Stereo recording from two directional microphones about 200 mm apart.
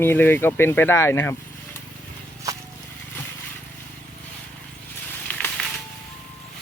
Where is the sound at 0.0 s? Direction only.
10° left (ahead or behind).